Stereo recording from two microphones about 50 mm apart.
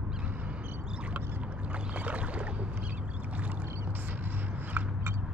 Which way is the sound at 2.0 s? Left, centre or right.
Right.